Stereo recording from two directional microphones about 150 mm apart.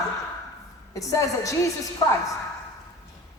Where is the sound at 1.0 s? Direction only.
20° left (ahead or behind).